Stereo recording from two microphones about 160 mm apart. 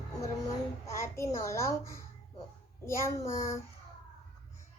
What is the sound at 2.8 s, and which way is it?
Child singing, 15° left (ahead or behind).